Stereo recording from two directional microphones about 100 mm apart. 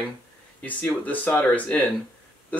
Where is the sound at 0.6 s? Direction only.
15° left (ahead or behind).